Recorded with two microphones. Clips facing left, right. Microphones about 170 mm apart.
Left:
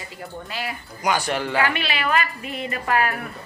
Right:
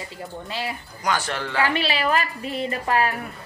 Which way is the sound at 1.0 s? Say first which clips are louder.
Left 3 dB; 15° left (ahead or behind).